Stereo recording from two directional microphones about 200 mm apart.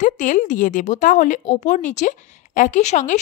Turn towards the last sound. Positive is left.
turn(degrees=35)  # may be behind; listen again after turning